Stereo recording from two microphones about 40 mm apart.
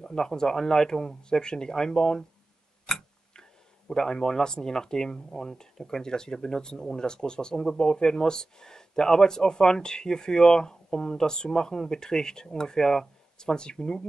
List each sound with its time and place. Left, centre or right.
0.0 s speech: centre
2.9 s tick-tock: centre
3.9 s speech: centre